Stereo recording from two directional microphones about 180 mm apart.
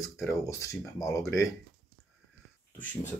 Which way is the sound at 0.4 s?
15° left (ahead or behind).